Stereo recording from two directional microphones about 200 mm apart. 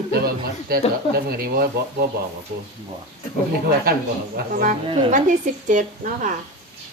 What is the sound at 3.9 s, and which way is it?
A woman's voice, 50° right (ahead or behind).